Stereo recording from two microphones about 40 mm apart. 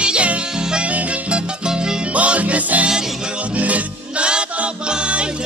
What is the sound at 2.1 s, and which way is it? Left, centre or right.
Music, right.